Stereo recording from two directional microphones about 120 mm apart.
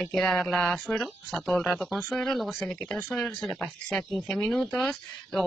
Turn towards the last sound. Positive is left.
turn(degrees=0)  # may be behind; listen again after turning